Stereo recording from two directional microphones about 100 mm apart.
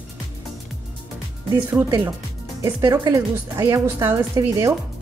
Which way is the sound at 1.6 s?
20° right (ahead or behind).